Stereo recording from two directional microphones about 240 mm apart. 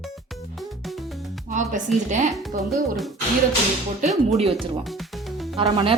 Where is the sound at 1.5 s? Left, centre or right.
Right.